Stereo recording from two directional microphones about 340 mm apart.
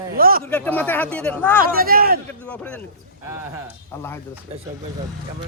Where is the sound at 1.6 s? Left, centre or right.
Right.